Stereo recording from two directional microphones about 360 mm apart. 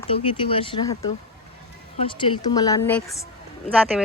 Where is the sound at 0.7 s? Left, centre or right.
Left.